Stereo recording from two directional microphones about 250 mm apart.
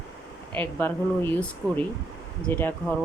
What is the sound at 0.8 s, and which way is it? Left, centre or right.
Speech, centre.